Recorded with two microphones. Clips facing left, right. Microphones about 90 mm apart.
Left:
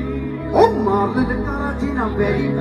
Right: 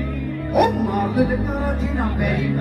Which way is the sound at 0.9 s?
20° left (ahead or behind).